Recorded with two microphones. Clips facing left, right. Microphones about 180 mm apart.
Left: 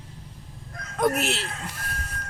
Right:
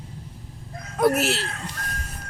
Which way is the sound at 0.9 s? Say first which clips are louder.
Right 3 dB; 5° right (ahead or behind).